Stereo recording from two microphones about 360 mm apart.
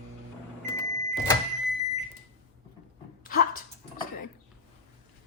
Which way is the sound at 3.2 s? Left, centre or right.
Left.